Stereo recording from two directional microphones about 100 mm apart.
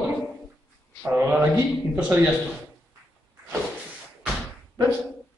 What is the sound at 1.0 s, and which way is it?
Speech, 15° right (ahead or behind).